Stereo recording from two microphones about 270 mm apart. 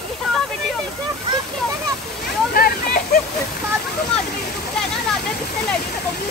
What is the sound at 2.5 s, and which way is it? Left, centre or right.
Speech, left.